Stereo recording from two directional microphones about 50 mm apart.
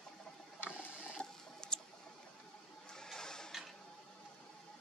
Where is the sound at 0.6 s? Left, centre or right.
Left.